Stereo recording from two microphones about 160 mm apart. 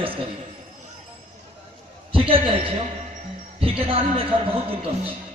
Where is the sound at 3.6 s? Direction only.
35° right (ahead or behind).